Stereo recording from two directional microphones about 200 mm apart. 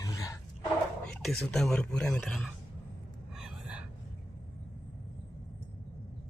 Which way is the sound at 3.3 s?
5° right (ahead or behind).